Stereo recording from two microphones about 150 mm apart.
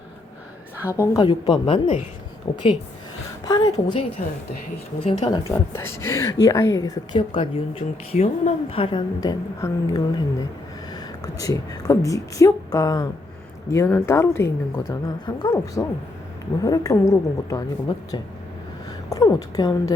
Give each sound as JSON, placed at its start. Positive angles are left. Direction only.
{"t": 0.9, "sound": "a woman's voice", "side_deg": 20}
{"t": 1.2, "sound": "a woman's voice", "side_deg": 35}
{"t": 3.4, "sound": "a woman's voice", "side_deg": 25}
{"t": 4.9, "sound": "a woman's voice", "side_deg": 45}
{"t": 5.5, "sound": "a woman's voice", "side_deg": 15}